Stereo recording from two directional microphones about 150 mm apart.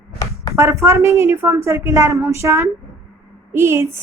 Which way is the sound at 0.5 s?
15° right (ahead or behind).